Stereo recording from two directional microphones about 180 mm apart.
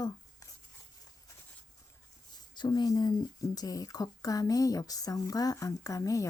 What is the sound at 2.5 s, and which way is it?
Speech, 25° left (ahead or behind).